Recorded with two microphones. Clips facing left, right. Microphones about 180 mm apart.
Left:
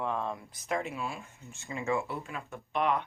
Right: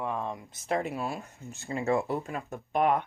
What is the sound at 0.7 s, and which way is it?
Speech, 35° right (ahead or behind).